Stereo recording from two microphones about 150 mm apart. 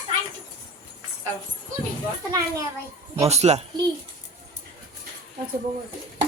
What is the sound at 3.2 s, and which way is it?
Speech, 45° right (ahead or behind).